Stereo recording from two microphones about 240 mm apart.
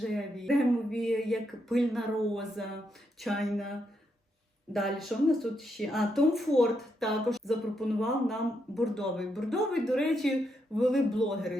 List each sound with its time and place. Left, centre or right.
0.0 s speech: centre